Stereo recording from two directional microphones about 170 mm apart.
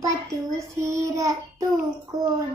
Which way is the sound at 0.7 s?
20° right (ahead or behind).